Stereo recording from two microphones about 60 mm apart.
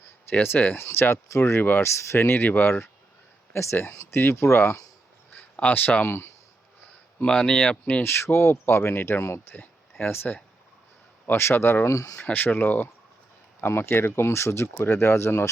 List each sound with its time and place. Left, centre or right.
0.0 s speech: left
3.5 s speech: left
7.3 s speech: centre
8.0 s speech: left
10.0 s speech: left
11.5 s speech: left
11.9 s speech: left
12.2 s speech: left